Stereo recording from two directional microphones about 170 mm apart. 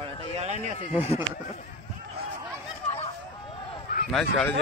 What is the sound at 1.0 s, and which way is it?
Speech, 35° left (ahead or behind).